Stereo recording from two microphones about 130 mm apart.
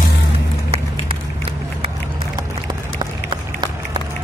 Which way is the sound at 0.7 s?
45° right (ahead or behind).